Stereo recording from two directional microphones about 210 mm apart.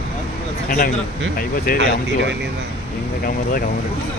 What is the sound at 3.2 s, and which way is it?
Speech, 45° left (ahead or behind).